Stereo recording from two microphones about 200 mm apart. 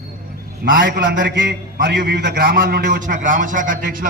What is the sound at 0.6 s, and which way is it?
A man's voice, 45° right (ahead or behind).